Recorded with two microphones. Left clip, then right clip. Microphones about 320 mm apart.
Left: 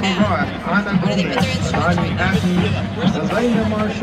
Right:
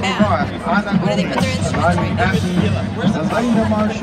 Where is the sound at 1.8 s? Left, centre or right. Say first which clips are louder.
Right 4 dB; centre.